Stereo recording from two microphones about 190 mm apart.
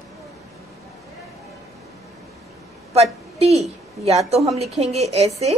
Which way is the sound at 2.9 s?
35° right (ahead or behind).